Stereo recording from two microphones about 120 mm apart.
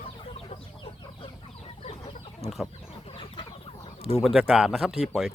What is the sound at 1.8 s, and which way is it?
Chicken, 55° left (ahead or behind).